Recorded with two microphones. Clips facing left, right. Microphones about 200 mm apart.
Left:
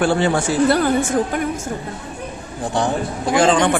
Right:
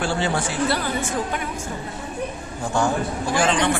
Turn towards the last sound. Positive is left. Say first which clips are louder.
# left 5 dB
turn(degrees=45)  # may be behind; listen again after turning